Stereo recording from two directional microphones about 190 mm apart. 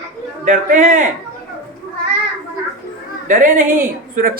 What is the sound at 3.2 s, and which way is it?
A woman's voice, 40° right (ahead or behind).